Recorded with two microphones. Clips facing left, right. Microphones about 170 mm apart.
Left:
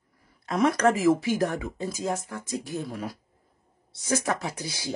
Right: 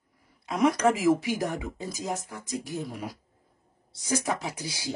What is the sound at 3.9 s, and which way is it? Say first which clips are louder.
Speech: left 2 dB; 15° right (ahead or behind).